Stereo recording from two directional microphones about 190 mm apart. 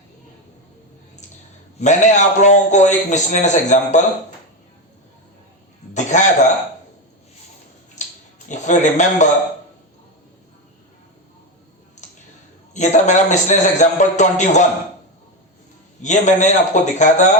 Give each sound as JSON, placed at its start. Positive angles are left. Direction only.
{"t": 1.8, "sound": "a man's voice", "side_deg": 40}
{"t": 5.9, "sound": "a sound", "side_deg": 40}
{"t": 8.0, "sound": "a sound", "side_deg": 40}
{"t": 8.4, "sound": "a man's voice", "side_deg": 40}
{"t": 12.7, "sound": "a man's voice", "side_deg": 40}
{"t": 16.0, "sound": "a man's voice", "side_deg": 40}